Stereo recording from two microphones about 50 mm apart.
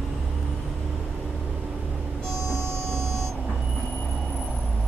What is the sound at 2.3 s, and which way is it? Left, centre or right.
Vehicle, right.